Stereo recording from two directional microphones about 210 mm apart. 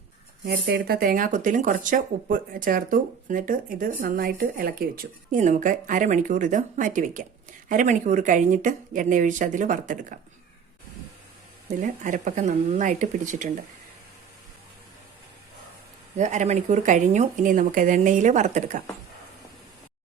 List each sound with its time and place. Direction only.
0.4 s speech: 50° right (ahead or behind)
11.8 s speech: 35° right (ahead or behind)
16.1 s speech: 35° right (ahead or behind)